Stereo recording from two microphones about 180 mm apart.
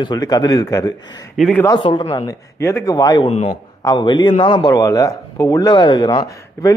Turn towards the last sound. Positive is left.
turn(degrees=25)  # may be behind; listen again after turning